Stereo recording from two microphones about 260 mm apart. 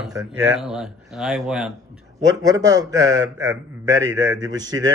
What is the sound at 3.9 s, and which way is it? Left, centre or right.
Speech, right.